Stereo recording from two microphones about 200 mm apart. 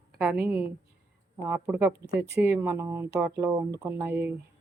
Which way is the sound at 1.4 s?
15° right (ahead or behind).